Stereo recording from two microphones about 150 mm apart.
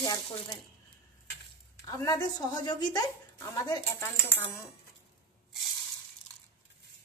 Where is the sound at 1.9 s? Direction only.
25° left (ahead or behind).